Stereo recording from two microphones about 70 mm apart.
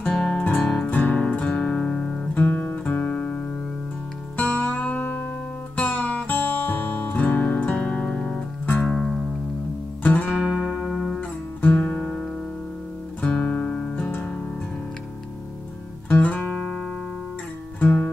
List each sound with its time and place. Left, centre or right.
0.1 s music: centre
0.4 s music: left; by 9.2 s centre
10.0 s music: left; by 11.1 s centre
11.1 s guitar: left
16.1 s music: left
17.7 s music: left